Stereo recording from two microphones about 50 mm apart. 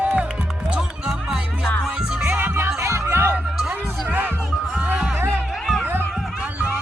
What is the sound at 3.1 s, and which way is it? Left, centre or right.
Music, right.